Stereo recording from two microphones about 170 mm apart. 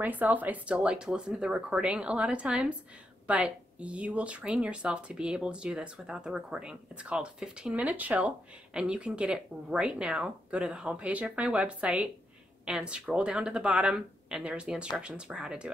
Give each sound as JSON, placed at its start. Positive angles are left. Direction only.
{"t": 0.0, "sound": "speech", "side_deg": -10}